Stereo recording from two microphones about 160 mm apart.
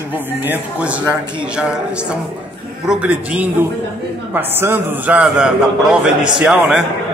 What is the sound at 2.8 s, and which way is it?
A man's voice, 5° right (ahead or behind).